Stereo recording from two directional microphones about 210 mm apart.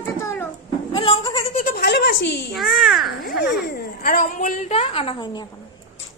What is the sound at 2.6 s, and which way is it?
Speech, centre (ahead or behind).